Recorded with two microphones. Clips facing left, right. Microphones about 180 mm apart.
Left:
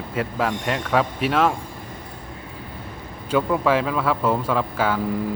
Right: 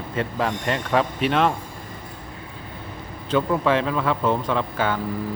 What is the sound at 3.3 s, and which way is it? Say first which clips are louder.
Speech: left 1 dB; 5° left (ahead or behind).